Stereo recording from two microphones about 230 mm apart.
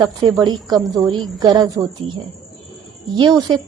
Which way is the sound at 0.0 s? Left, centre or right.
Centre.